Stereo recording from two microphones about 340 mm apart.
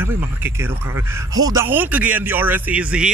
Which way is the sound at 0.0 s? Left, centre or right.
Centre.